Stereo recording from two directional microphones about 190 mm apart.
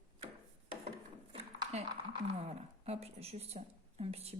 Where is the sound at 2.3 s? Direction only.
35° right (ahead or behind).